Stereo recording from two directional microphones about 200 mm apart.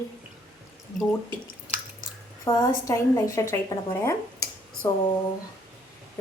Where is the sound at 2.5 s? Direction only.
20° left (ahead or behind).